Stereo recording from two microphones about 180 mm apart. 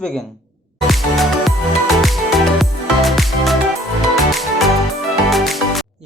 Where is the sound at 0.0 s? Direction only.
5° left (ahead or behind).